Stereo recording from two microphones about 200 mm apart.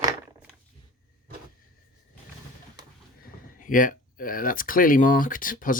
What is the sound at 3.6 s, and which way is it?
Speech, 40° left (ahead or behind).